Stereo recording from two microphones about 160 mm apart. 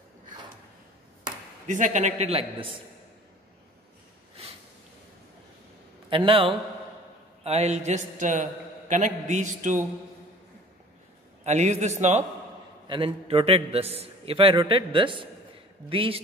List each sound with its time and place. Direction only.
1.7 s a man's voice: 50° right (ahead or behind)
6.0 s a man's voice: 30° right (ahead or behind); by 9.8 s 50° right (ahead or behind)
11.4 s a man's voice: 45° right (ahead or behind)
12.8 s a man's voice: 30° right (ahead or behind)